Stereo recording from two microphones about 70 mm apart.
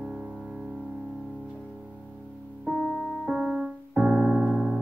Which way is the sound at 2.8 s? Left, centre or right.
Centre.